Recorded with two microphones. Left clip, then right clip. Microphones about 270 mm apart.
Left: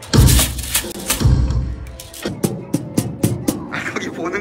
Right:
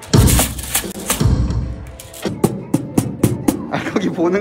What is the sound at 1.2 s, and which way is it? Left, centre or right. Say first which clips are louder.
Music: right 1 dB; right.